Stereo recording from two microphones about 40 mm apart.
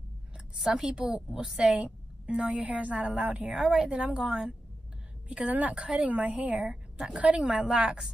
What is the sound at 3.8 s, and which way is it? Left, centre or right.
Speech, right.